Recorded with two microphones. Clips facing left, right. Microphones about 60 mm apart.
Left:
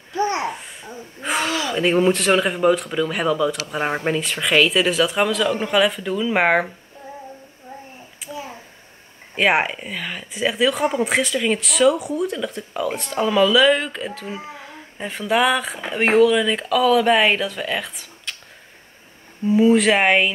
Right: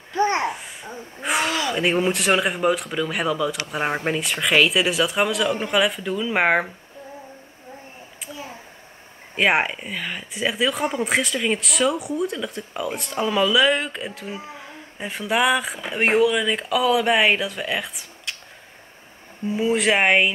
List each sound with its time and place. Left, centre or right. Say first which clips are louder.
0.1 s babbling: right 1 dB; right
0.5 s babbling: even; centre
1.2 s speech: even; centre
8.3 s a sound: left 4 dB; centre
9.3 s speech: left 1 dB; centre
19.4 s speech: left 6 dB; centre